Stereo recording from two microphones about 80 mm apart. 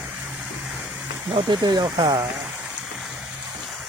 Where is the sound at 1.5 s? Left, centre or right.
Right.